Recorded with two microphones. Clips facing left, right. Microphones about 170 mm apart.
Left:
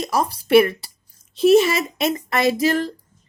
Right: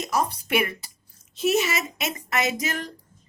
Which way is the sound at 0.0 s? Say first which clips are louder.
Left 3 dB; 30° left (ahead or behind).